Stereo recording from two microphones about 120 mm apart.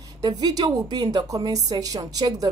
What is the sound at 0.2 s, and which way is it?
A woman's voice, 35° right (ahead or behind).